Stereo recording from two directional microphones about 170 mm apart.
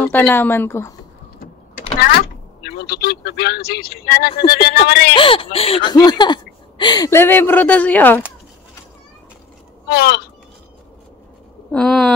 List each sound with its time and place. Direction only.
0.0 s speech: 10° left (ahead or behind)
2.6 s speech: 65° left (ahead or behind)
5.1 s speech: 30° left (ahead or behind); by 8.2 s 10° left (ahead or behind)
9.8 s speech: 65° left (ahead or behind)
11.7 s a sound: 5° left (ahead or behind)